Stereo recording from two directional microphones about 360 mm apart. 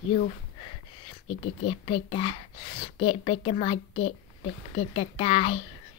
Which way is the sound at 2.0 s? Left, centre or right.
Centre.